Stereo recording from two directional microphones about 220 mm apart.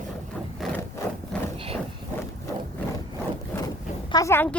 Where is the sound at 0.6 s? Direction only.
Centre (ahead or behind).